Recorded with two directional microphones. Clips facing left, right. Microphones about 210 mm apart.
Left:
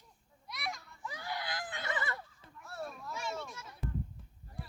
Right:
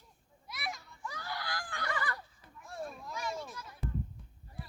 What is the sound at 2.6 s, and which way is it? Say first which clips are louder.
Children playing: right 1 dB; 15° right (ahead or behind).